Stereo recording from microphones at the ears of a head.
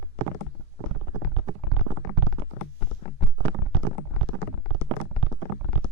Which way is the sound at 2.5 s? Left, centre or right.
Left.